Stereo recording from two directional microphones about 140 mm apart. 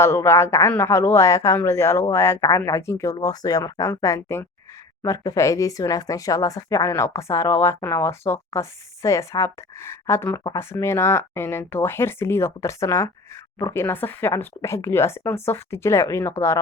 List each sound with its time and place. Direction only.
0.0 s speech: 20° left (ahead or behind)